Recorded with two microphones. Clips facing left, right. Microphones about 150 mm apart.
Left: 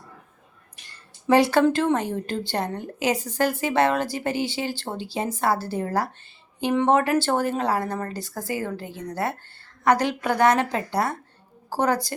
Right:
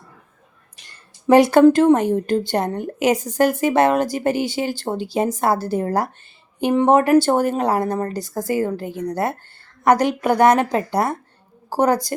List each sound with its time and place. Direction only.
1.5 s a woman's voice: 45° right (ahead or behind)